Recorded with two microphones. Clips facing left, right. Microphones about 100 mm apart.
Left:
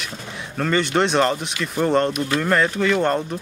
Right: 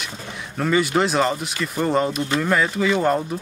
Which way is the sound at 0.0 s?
Centre (ahead or behind).